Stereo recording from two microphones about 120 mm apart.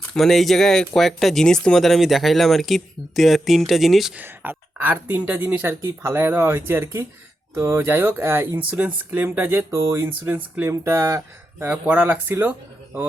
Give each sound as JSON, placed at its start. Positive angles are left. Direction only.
{"t": 0.1, "sound": "speech", "side_deg": 5}
{"t": 4.2, "sound": "speech", "side_deg": -15}